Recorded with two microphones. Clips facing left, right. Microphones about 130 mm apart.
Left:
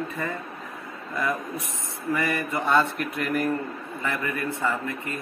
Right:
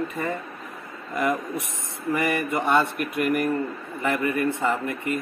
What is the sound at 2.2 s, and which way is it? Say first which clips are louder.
Speech: right 3 dB; 20° right (ahead or behind).